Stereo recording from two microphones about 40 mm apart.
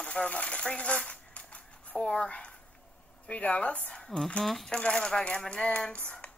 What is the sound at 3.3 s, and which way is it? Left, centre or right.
Speech, left.